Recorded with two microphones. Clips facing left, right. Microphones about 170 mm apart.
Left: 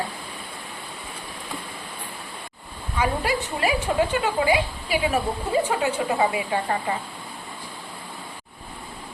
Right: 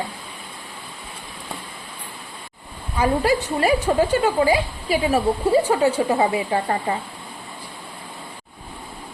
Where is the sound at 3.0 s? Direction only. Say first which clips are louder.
Right 5 dB; 35° right (ahead or behind).